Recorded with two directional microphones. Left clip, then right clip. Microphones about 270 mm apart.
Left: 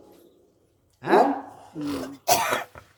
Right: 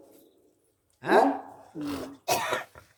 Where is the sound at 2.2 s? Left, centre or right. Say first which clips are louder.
Left 6 dB; left.